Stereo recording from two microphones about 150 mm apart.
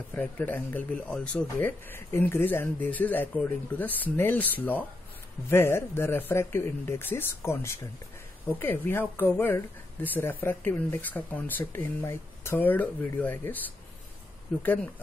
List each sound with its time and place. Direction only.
0.1 s speech: 10° left (ahead or behind)